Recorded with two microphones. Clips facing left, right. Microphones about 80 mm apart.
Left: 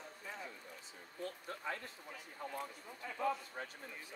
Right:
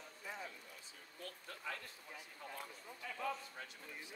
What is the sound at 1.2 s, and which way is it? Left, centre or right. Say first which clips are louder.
Speech: left 6 dB; left.